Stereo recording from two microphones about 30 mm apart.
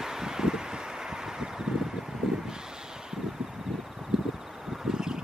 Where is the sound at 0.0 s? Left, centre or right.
Centre.